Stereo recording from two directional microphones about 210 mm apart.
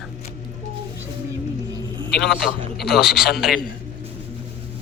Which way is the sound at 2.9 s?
Centre (ahead or behind).